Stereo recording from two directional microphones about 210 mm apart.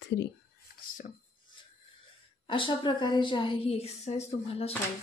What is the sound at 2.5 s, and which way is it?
A woman's voice, 25° left (ahead or behind).